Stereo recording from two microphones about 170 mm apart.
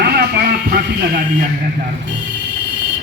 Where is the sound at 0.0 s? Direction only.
65° right (ahead or behind).